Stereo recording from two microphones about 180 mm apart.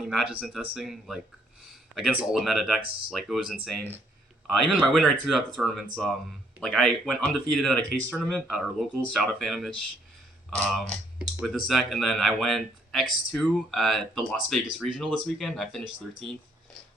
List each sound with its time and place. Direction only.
0.0 s speech: 5° right (ahead or behind)
2.8 s speech: 30° right (ahead or behind)
3.1 s speech: centre (ahead or behind)